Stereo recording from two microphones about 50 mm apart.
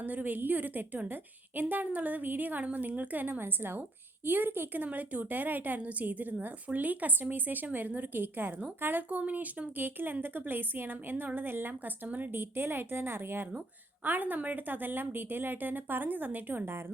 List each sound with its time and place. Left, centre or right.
0.0 s a woman's voice: right
14.0 s a woman's voice: right